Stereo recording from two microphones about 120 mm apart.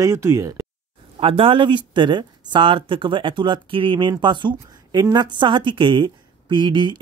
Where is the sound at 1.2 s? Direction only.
50° right (ahead or behind).